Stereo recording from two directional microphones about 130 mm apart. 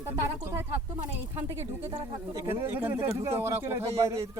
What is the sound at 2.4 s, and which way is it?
Speech, 20° right (ahead or behind).